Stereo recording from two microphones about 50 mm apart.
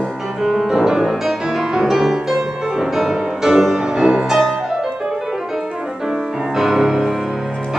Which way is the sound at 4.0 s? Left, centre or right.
Centre.